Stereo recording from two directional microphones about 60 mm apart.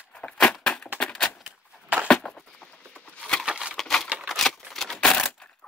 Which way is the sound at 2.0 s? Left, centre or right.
Centre.